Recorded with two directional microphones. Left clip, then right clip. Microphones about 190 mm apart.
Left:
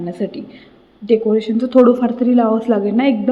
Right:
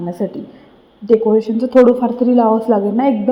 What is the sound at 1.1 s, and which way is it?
A woman's voice, 10° right (ahead or behind).